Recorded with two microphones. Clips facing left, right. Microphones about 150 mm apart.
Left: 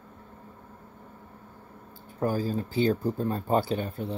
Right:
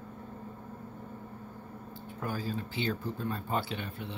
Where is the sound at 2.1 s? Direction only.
40° left (ahead or behind).